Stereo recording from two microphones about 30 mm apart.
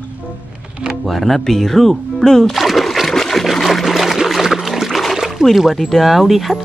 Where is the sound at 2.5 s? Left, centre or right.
Centre.